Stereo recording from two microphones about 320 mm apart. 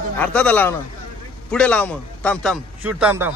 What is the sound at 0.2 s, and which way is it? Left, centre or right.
A man's voice, centre.